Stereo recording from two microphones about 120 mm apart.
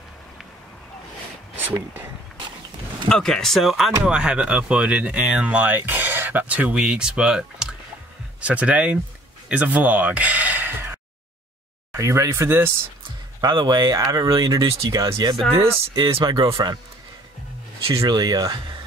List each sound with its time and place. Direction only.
3.1 s speech: 5° left (ahead or behind); by 9.0 s 10° right (ahead or behind)
9.5 s gasp: 10° right (ahead or behind)
12.0 s speech: 25° right (ahead or behind)
13.4 s speech: 35° right (ahead or behind)
15.5 s speech: 45° right (ahead or behind)
17.9 s speech: 35° right (ahead or behind)